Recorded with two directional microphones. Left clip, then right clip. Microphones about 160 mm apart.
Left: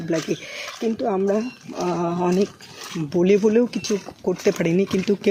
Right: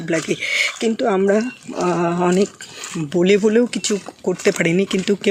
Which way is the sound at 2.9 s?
10° right (ahead or behind).